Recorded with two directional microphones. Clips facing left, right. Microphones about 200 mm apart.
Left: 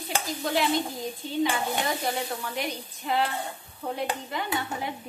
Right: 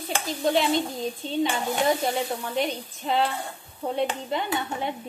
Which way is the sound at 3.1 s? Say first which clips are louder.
Right 2 dB; 25° right (ahead or behind).